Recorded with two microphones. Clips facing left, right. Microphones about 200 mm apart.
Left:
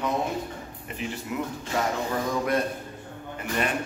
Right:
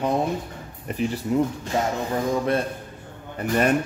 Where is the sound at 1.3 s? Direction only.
35° right (ahead or behind).